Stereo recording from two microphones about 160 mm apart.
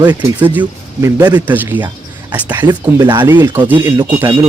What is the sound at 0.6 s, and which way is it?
Speech, 25° right (ahead or behind).